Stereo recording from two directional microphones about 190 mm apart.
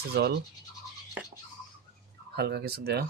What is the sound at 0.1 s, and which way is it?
Speech, 60° right (ahead or behind).